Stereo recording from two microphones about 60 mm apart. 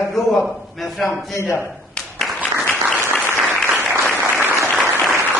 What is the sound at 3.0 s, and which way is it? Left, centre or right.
Applause, right.